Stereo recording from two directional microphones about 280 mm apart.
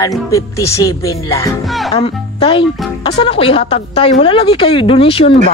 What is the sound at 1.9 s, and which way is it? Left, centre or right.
A woman's voice, centre.